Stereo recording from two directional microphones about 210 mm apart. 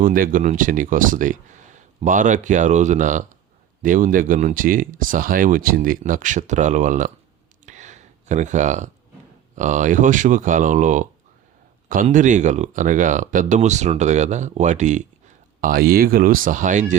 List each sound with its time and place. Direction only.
0.0 s speech: 40° right (ahead or behind)
7.6 s a sound: 35° right (ahead or behind)
9.6 s speech: 35° right (ahead or behind)
15.6 s speech: 45° right (ahead or behind)